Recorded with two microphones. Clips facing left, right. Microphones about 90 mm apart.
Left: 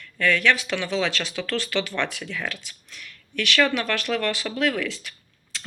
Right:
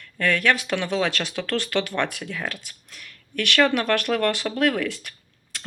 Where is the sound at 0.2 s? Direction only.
45° right (ahead or behind).